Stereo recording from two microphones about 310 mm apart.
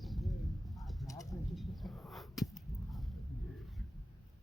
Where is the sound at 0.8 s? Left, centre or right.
Centre.